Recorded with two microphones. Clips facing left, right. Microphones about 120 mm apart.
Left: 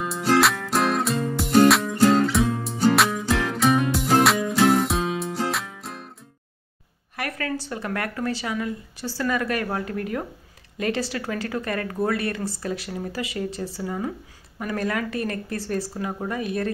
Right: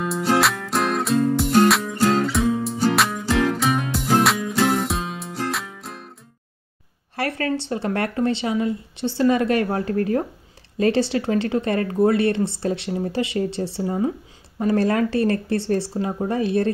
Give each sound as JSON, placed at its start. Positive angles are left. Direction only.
{"t": 0.0, "sound": "music", "side_deg": 0}
{"t": 7.2, "sound": "a woman's voice", "side_deg": -30}